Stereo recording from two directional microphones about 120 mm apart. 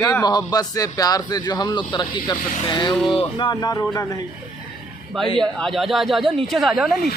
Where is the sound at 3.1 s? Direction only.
45° left (ahead or behind).